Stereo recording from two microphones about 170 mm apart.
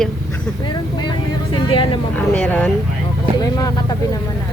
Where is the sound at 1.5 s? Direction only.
30° left (ahead or behind).